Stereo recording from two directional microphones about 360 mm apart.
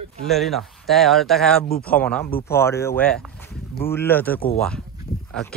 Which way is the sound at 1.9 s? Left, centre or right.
Centre.